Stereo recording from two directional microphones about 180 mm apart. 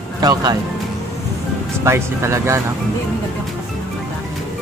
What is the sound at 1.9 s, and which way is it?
Speech, 15° right (ahead or behind).